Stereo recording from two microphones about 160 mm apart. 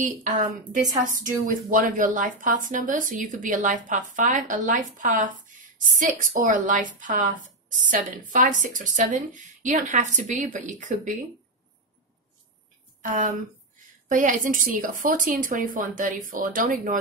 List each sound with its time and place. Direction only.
0.0 s speech: 55° right (ahead or behind)
8.3 s speech: 55° right (ahead or behind)
13.0 s speech: 55° right (ahead or behind)